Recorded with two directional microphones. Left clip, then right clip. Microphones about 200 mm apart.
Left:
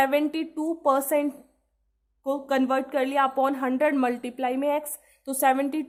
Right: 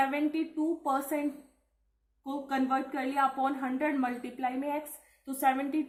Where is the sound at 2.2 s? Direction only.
50° left (ahead or behind).